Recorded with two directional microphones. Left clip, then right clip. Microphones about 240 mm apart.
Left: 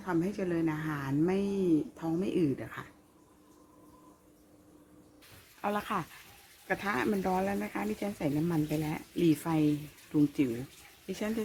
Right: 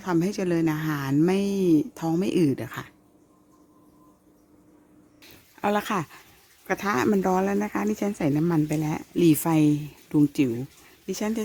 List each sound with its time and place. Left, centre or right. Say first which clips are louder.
0.0 s a woman's voice: right 7 dB; right
5.6 s a woman's voice: right 8 dB; right